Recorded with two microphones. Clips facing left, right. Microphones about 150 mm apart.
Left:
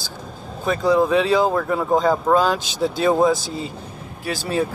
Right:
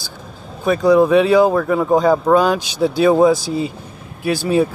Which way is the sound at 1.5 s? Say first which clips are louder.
Right 4 dB; 5° right (ahead or behind).